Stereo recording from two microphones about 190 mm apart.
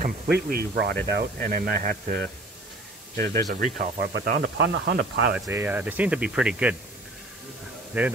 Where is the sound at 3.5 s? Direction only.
45° right (ahead or behind).